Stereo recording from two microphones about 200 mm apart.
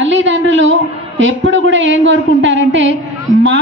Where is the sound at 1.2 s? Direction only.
70° right (ahead or behind).